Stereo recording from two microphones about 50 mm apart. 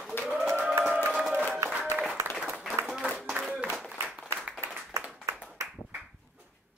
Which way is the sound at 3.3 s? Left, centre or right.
Right.